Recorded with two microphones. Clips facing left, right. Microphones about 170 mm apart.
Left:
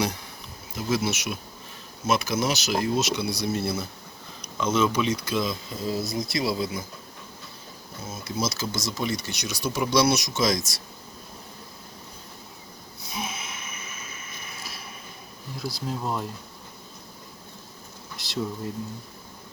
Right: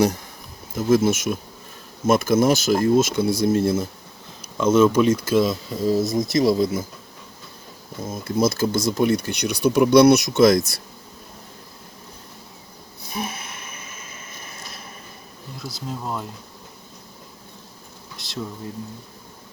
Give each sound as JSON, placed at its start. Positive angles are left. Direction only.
{"t": 0.8, "sound": "speech", "side_deg": -50}
{"t": 8.1, "sound": "speech", "side_deg": -50}
{"t": 13.1, "sound": "a sound", "side_deg": -55}
{"t": 15.5, "sound": "speech", "side_deg": 0}
{"t": 18.2, "sound": "speech", "side_deg": 0}